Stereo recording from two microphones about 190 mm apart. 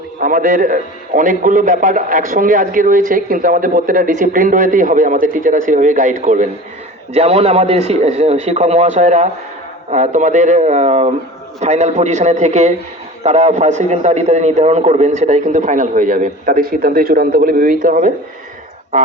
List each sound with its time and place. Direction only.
0.2 s a man's voice: 45° right (ahead or behind)